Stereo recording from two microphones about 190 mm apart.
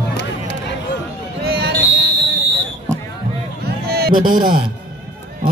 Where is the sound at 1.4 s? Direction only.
55° right (ahead or behind).